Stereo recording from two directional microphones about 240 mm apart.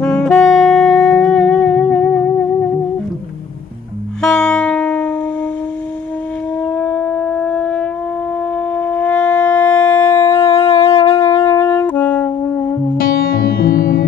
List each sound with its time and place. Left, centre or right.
0.0 s saxophone: centre
4.2 s music: centre
6.6 s shofar: centre
8.7 s wind instrument: centre
9.9 s shofar: centre
10.8 s saxophone: centre
12.9 s music: left